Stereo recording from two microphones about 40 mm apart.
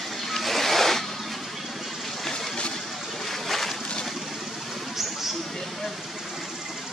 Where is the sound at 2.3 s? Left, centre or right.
Centre.